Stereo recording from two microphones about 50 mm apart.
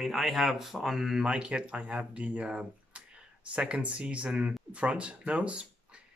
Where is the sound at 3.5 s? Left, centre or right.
Right.